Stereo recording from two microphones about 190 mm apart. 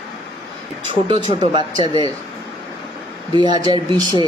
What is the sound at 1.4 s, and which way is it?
Speech, 25° right (ahead or behind).